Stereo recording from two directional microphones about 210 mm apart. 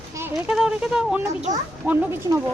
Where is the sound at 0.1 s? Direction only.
10° right (ahead or behind).